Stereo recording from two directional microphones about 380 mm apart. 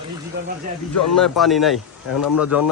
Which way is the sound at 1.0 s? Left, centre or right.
Centre.